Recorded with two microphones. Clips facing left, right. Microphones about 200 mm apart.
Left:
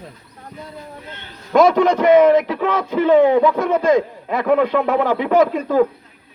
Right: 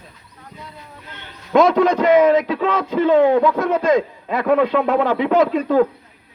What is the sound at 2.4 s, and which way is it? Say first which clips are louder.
A man's voice: even; 10° left (ahead or behind).